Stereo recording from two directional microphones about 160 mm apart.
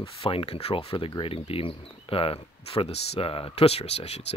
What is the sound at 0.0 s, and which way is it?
Speech, 35° left (ahead or behind).